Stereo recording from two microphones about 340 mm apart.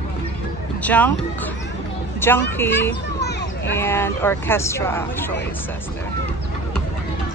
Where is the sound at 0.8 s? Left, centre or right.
Centre.